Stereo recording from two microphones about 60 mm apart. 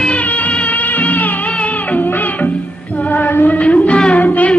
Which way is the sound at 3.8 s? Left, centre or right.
Centre.